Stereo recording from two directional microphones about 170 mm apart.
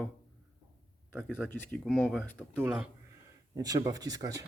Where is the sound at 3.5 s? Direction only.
20° right (ahead or behind).